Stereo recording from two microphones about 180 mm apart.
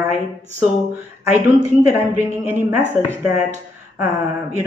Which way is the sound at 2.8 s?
10° left (ahead or behind).